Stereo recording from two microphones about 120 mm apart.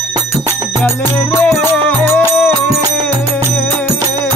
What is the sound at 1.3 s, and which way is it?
Music, 15° left (ahead or behind).